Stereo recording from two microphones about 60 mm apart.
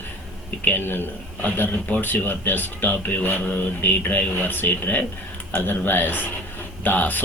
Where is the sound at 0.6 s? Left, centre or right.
Left.